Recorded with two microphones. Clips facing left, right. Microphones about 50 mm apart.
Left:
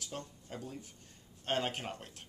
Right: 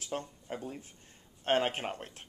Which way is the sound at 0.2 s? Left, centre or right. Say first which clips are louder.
Right 5 dB; right.